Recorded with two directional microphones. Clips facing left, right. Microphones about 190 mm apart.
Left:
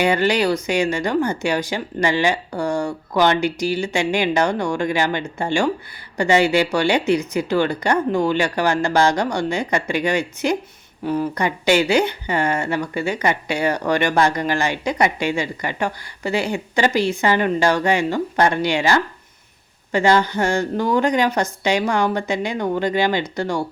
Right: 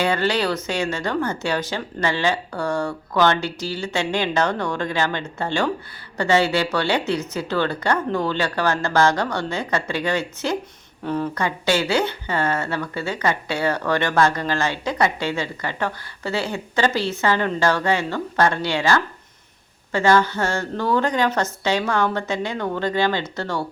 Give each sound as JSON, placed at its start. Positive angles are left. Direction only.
{"t": 0.0, "sound": "speech", "side_deg": 15}